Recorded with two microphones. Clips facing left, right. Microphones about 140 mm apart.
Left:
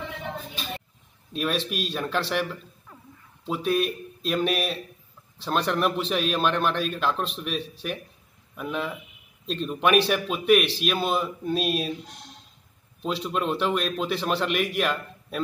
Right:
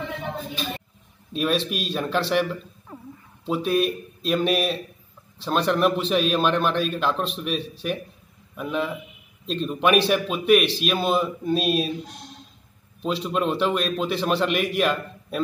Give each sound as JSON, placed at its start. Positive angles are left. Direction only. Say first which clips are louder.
{"t": 1.3, "sound": "a man's voice", "louder": "right 4 dB", "side_deg": 0}
{"t": 3.4, "sound": "a man's voice", "louder": "right 3 dB", "side_deg": 0}
{"t": 13.0, "sound": "a man's voice", "louder": "right 3 dB", "side_deg": 0}